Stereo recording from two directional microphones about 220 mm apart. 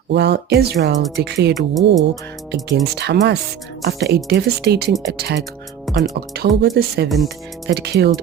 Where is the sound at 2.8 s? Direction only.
50° right (ahead or behind).